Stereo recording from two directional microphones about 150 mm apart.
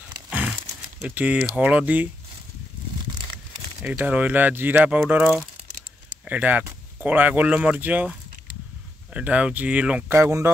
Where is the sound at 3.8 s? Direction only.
10° right (ahead or behind).